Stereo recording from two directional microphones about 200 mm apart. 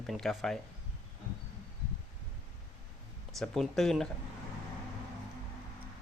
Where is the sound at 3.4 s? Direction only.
Centre (ahead or behind).